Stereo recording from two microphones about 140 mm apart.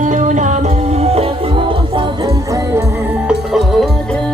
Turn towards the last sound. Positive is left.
turn(degrees=-5)  # may be behind; listen again after turning